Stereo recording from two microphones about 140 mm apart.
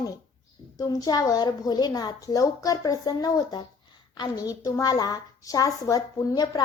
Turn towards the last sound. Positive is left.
turn(degrees=30)  # may be behind; listen again after turning